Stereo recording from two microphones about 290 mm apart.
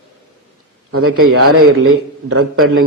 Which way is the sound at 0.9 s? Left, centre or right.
Right.